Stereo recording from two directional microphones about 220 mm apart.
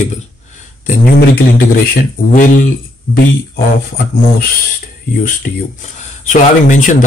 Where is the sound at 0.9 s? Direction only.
45° left (ahead or behind).